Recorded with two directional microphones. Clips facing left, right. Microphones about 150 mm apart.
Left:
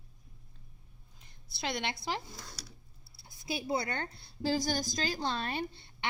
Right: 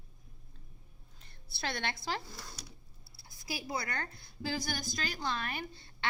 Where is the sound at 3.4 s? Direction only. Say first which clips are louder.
Left 5 dB; 20° left (ahead or behind).